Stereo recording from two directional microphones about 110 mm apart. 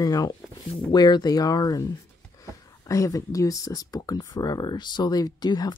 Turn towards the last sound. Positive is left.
turn(degrees=40)  # may be behind; listen again after turning